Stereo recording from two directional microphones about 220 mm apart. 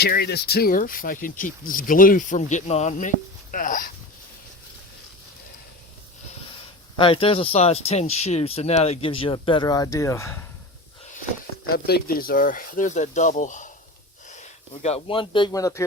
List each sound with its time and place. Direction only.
0.0 s speech: 45° left (ahead or behind)
6.9 s speech: 25° left (ahead or behind)
11.7 s speech: 45° left (ahead or behind); by 15.8 s 15° left (ahead or behind)